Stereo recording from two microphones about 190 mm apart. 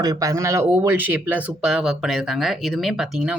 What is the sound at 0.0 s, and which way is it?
Speech, 20° right (ahead or behind).